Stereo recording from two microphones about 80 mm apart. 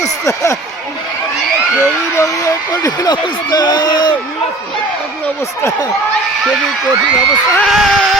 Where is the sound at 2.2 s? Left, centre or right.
Left.